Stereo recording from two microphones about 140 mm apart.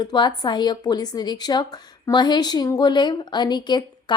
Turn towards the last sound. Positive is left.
turn(degrees=30)  # may be behind; listen again after turning